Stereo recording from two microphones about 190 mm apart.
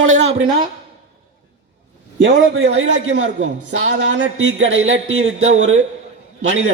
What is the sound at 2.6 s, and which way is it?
Speech, 90° right.